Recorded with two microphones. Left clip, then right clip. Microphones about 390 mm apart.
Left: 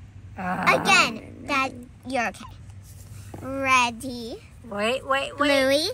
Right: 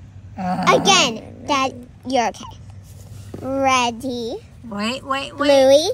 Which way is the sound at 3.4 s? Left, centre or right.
Left.